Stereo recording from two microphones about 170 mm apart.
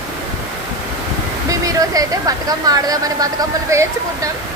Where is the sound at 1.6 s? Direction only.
20° right (ahead or behind).